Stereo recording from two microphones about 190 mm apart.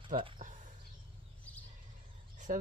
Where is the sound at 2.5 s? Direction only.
45° right (ahead or behind).